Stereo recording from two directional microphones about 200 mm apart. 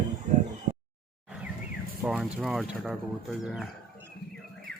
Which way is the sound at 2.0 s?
Centre (ahead or behind).